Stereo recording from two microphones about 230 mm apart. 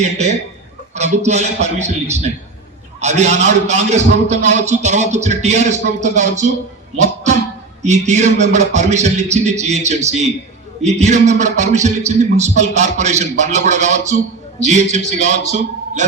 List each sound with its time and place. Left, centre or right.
0.0 s a man's voice: right
7.8 s a man's voice: right